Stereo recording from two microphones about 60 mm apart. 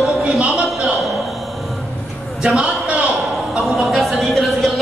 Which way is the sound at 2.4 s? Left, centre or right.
Centre.